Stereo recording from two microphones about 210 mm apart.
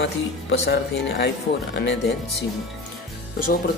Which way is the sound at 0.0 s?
55° left (ahead or behind).